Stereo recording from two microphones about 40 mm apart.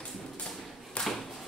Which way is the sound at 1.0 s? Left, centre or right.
Left.